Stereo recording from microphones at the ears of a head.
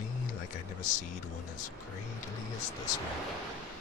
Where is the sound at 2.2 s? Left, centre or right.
Left.